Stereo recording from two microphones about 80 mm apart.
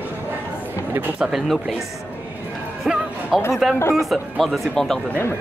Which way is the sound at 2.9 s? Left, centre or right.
Centre.